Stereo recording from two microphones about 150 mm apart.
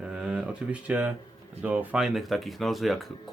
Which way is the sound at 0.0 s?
5° right (ahead or behind).